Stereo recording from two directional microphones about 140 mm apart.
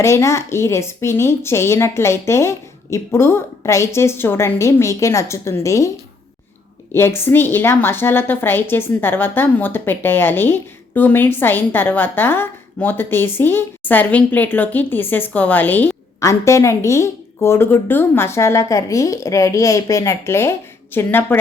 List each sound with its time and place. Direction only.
0.0 s a woman's voice: 20° left (ahead or behind)
6.9 s a woman's voice: 15° left (ahead or behind)